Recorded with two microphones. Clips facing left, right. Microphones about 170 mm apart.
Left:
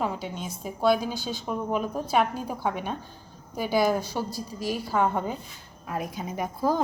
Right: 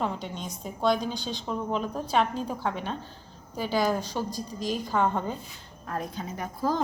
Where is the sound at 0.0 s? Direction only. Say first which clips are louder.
Left 1 dB; 5° left (ahead or behind).